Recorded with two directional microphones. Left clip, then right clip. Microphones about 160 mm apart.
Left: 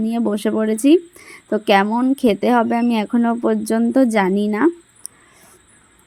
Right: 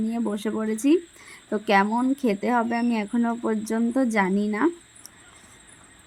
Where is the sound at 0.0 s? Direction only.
35° left (ahead or behind).